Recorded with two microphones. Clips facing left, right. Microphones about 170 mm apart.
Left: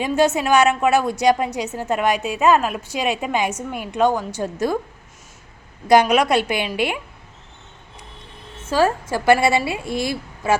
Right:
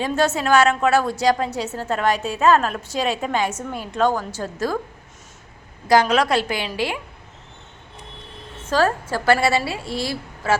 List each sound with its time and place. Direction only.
0.0 s a woman's voice: 15° left (ahead or behind)
5.9 s a woman's voice: 15° left (ahead or behind)
8.7 s a woman's voice: 15° left (ahead or behind)